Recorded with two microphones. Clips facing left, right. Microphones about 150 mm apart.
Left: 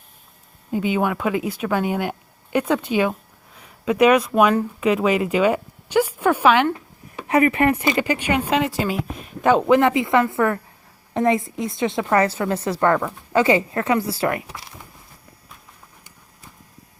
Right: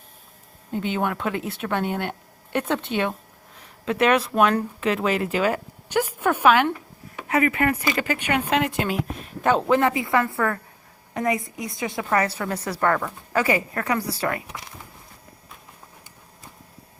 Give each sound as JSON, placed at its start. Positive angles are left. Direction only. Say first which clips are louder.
{"t": 0.7, "sound": "a woman's voice", "louder": "left 4 dB", "side_deg": 5}
{"t": 6.5, "sound": "speech", "louder": "right 1 dB", "side_deg": -5}
{"t": 7.3, "sound": "a woman's voice", "louder": "left 4 dB", "side_deg": 25}
{"t": 8.3, "sound": "a woman's voice", "louder": "right 1 dB", "side_deg": 10}